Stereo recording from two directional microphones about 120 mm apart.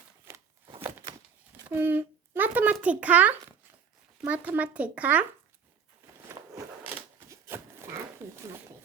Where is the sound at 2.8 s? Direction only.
10° right (ahead or behind).